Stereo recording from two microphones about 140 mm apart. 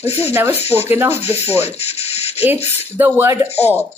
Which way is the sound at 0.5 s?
50° left (ahead or behind).